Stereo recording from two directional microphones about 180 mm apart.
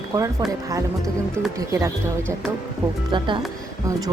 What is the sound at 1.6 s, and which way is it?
Speech, 15° right (ahead or behind).